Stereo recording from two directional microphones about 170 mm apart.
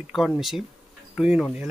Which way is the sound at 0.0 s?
Centre (ahead or behind).